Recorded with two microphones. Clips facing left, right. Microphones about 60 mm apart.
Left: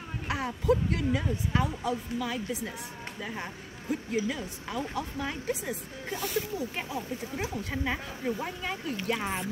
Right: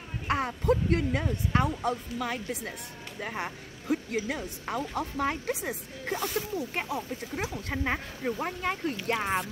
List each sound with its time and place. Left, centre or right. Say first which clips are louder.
0.3 s a woman's voice: right 1 dB; right
7.7 s speech: right 1 dB; right